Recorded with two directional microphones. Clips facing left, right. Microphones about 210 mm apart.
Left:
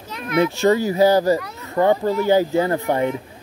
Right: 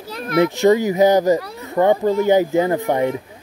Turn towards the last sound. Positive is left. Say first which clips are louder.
# right 2 dB
turn(degrees=-15)  # may be behind; listen again after turning